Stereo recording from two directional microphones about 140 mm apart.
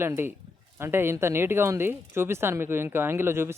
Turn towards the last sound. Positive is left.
turn(degrees=-15)  # may be behind; listen again after turning